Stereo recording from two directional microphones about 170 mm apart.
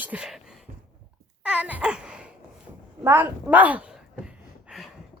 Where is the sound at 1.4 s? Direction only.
10° right (ahead or behind).